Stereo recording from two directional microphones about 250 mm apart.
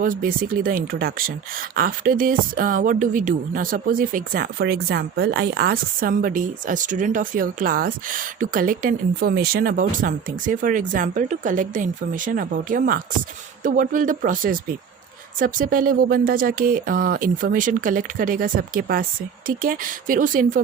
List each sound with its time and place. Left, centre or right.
0.0 s speech: right